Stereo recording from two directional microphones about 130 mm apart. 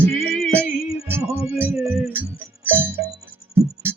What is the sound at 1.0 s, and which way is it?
Music, 20° right (ahead or behind).